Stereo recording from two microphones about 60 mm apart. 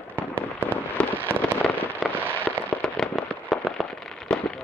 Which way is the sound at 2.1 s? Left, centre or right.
Right.